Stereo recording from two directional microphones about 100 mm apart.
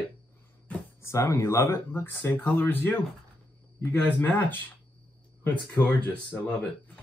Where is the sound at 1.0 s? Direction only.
30° left (ahead or behind).